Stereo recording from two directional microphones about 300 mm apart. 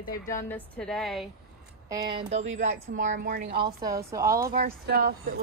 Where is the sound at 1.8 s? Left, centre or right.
Centre.